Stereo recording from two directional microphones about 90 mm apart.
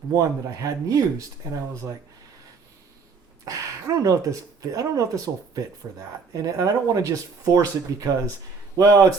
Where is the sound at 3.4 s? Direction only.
40° right (ahead or behind).